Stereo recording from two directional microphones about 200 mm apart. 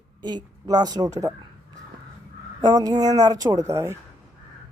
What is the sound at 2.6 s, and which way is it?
Speech, 20° right (ahead or behind).